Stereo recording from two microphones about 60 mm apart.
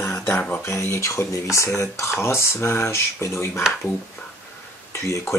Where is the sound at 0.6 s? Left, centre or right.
Left.